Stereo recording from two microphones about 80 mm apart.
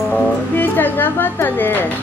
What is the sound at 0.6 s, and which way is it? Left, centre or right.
Speech, left.